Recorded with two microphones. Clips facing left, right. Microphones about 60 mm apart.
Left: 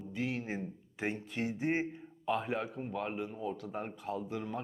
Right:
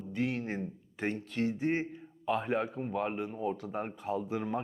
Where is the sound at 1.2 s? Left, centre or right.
Centre.